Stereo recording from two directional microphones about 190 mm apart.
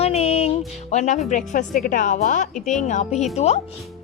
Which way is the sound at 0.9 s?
40° left (ahead or behind).